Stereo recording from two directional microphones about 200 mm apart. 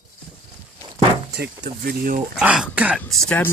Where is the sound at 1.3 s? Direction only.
55° right (ahead or behind).